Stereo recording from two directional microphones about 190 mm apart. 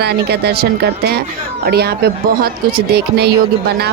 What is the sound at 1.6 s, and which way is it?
A woman's voice, 55° right (ahead or behind).